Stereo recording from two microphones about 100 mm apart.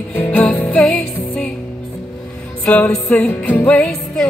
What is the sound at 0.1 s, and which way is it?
Music, 15° left (ahead or behind).